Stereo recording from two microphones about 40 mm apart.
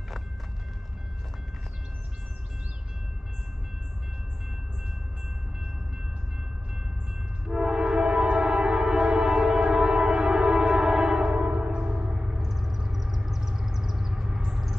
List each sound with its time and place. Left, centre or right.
7.4 s train: centre